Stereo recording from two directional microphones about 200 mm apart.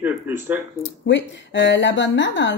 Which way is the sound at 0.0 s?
10° right (ahead or behind).